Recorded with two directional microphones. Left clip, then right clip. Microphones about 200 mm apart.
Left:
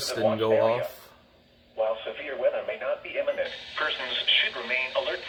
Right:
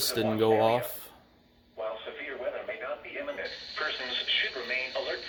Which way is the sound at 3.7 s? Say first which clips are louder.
Left 3 dB; 10° right (ahead or behind).